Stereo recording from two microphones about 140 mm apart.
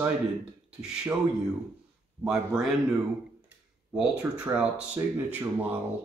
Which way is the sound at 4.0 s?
10° right (ahead or behind).